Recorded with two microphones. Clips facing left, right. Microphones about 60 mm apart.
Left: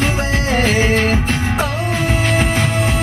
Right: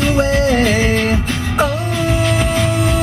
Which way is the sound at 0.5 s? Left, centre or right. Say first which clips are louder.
Right 1 dB; left.